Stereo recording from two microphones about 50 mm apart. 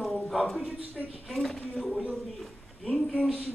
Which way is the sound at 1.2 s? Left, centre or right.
Centre.